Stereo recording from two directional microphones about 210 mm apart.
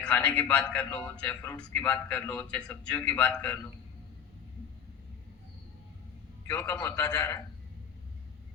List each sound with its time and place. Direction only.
0.0 s a man's voice: 5° left (ahead or behind)
6.5 s a man's voice: 15° left (ahead or behind)